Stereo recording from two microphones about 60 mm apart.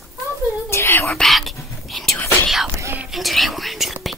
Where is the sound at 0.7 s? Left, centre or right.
Left.